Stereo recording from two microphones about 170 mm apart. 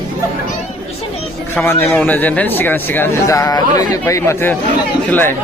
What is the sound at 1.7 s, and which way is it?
Speech, 10° left (ahead or behind).